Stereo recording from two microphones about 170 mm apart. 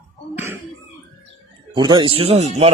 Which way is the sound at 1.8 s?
25° right (ahead or behind).